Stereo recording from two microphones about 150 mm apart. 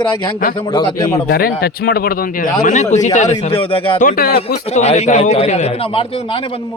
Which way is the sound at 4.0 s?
70° left (ahead or behind).